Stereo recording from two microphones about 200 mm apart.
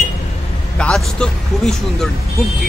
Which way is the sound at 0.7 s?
5° left (ahead or behind).